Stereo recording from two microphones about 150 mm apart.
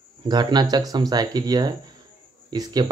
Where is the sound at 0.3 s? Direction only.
25° right (ahead or behind).